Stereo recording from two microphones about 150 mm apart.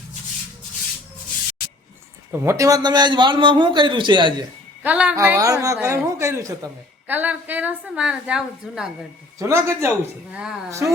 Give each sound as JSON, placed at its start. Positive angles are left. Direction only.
{"t": 2.4, "sound": "a man's voice", "side_deg": -20}
{"t": 4.8, "sound": "a woman's voice", "side_deg": -10}
{"t": 5.1, "sound": "a woman's voice", "side_deg": -20}
{"t": 9.4, "sound": "a woman's voice", "side_deg": -20}